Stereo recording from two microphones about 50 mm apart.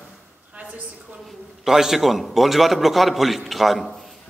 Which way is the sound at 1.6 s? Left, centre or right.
Centre.